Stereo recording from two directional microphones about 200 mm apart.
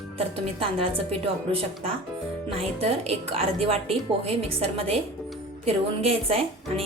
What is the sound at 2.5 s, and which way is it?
A woman's voice, 30° right (ahead or behind).